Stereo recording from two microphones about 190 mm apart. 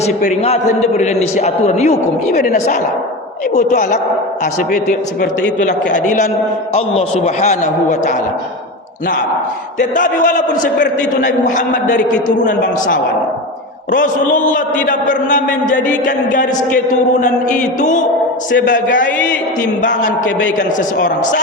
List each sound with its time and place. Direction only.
0.0 s a man's voice: 40° left (ahead or behind)
9.9 s a man's voice: 45° left (ahead or behind)
13.9 s a man's voice: 45° left (ahead or behind)
18.5 s a man's voice: 70° left (ahead or behind)